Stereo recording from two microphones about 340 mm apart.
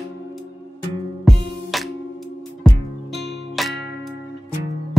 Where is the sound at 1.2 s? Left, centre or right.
Centre.